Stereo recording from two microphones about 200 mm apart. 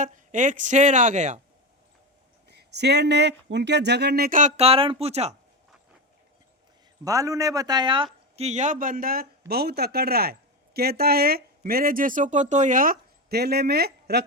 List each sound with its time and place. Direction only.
0.0 s speech: 40° right (ahead or behind)
2.5 s speech: 55° right (ahead or behind); by 5.3 s 30° right (ahead or behind)
7.0 s speech: 15° right (ahead or behind); by 14.3 s 55° right (ahead or behind)